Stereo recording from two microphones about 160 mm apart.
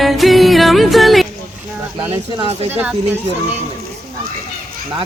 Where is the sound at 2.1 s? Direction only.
35° right (ahead or behind).